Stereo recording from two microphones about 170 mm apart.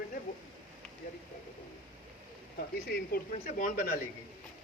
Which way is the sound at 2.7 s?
65° left (ahead or behind).